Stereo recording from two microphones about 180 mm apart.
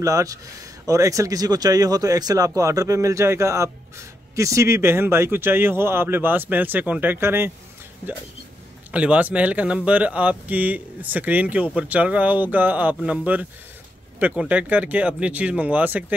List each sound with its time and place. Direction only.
0.0 s speech: 20° right (ahead or behind)
8.9 s speech: 5° right (ahead or behind)